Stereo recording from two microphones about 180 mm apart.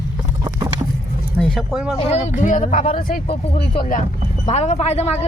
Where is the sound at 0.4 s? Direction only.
20° right (ahead or behind).